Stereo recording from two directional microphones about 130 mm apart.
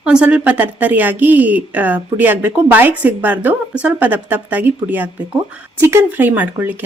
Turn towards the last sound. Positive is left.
turn(degrees=-15)  # may be behind; listen again after turning